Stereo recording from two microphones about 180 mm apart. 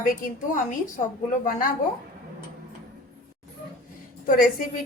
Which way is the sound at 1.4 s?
50° left (ahead or behind).